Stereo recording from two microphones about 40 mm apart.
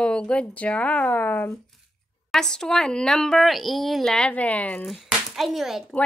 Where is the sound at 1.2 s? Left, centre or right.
Left.